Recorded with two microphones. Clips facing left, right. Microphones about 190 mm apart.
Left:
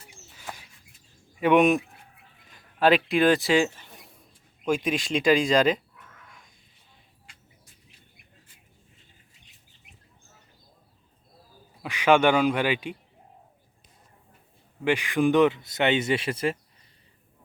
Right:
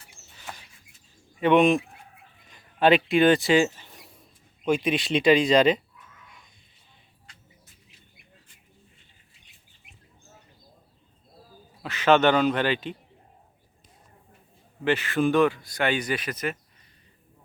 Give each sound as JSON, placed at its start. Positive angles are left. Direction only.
{"t": 1.4, "sound": "speech", "side_deg": 10}
{"t": 11.8, "sound": "speech", "side_deg": 10}
{"t": 14.8, "sound": "speech", "side_deg": 15}